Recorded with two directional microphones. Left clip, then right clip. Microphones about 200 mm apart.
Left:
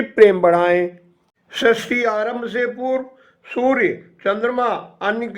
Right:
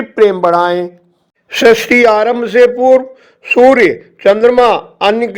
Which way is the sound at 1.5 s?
40° right (ahead or behind).